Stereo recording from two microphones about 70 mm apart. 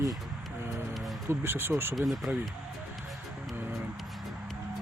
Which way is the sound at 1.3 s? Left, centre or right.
Right.